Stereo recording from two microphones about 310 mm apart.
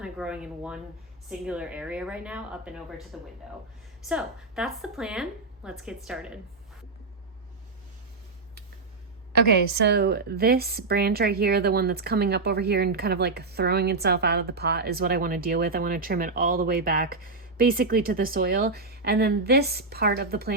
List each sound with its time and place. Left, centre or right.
0.0 s a woman's voice: centre
9.7 s a woman's voice: right